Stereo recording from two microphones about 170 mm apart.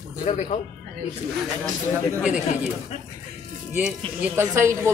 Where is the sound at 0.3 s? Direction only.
40° left (ahead or behind).